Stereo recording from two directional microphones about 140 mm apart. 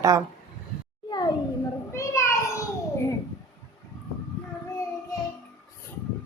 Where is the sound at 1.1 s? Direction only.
30° left (ahead or behind).